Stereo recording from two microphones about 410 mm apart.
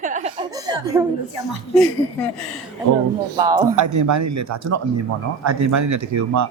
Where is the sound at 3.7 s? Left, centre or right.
Right.